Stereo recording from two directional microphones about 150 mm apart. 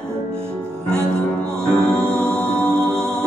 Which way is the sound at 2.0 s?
15° right (ahead or behind).